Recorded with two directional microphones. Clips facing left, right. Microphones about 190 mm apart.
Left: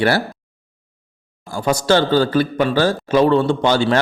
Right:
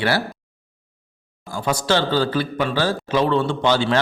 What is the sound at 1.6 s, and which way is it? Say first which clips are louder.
A man's voice: left 5 dB; 45° left (ahead or behind).